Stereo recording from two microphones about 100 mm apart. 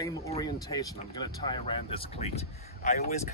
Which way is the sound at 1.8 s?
70° left (ahead or behind).